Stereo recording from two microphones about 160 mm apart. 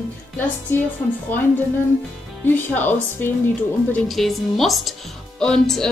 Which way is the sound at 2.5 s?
10° left (ahead or behind).